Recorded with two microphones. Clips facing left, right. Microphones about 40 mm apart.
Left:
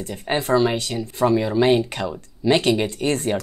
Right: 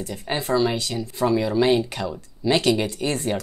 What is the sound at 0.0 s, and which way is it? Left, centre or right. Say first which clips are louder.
Speech: left 3 dB; left.